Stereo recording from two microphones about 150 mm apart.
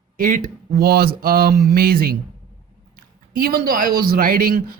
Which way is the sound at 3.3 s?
80° right.